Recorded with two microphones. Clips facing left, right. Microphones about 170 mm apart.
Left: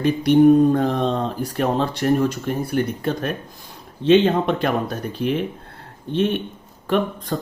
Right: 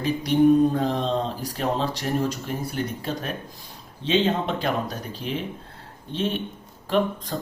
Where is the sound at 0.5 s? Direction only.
55° left (ahead or behind).